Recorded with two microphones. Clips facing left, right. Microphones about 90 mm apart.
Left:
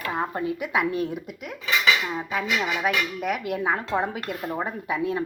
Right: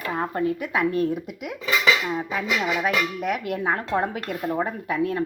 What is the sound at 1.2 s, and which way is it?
Speech, 10° right (ahead or behind).